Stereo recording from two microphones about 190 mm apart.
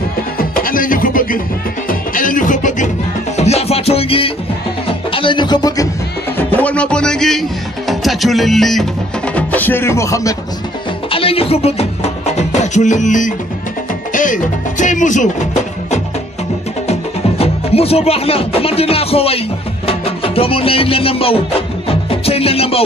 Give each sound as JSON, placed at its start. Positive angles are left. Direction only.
{"t": 0.4, "sound": "music", "side_deg": 50}
{"t": 4.8, "sound": "speech", "side_deg": 25}
{"t": 6.3, "sound": "music", "side_deg": 5}
{"t": 11.1, "sound": "music", "side_deg": 30}
{"t": 14.1, "sound": "speech", "side_deg": 45}
{"t": 17.4, "sound": "speech", "side_deg": 30}
{"t": 19.9, "sound": "music", "side_deg": 30}